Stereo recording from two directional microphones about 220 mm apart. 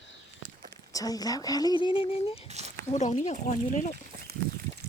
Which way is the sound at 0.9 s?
15° left (ahead or behind).